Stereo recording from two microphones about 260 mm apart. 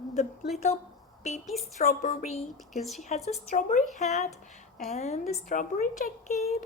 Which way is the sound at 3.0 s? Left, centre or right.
Left.